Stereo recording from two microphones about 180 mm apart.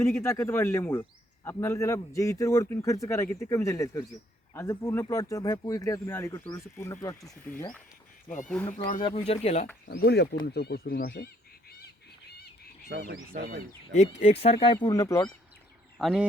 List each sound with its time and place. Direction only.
0.0 s speech: 15° left (ahead or behind)
8.4 s speech: 5° left (ahead or behind)
9.0 s speech: 30° left (ahead or behind)
9.8 s speech: 60° left (ahead or behind)
12.9 s speech: 75° right (ahead or behind)
13.3 s speech: 60° right (ahead or behind)
13.9 s speech: 35° left (ahead or behind); by 15.3 s 20° left (ahead or behind)
16.0 s speech: centre (ahead or behind)